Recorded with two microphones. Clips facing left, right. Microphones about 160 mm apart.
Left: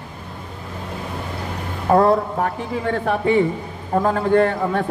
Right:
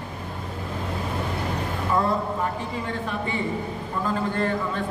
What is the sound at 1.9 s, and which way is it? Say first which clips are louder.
A man's voice: left 9 dB; 65° left (ahead or behind).